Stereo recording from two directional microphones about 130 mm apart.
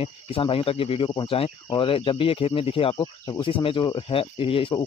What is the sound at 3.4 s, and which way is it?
A man's voice, 45° left (ahead or behind).